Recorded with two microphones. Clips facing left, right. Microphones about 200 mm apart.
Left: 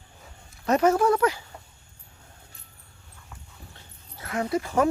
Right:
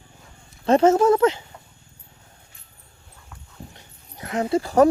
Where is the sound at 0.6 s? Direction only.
30° right (ahead or behind).